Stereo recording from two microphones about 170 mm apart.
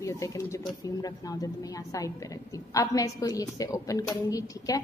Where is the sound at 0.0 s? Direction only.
20° left (ahead or behind).